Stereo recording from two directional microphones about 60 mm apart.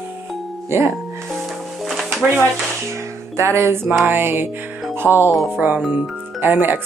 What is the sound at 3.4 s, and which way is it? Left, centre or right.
Music, right.